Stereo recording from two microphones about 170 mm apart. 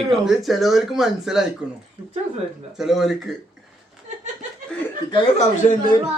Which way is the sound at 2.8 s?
Centre (ahead or behind).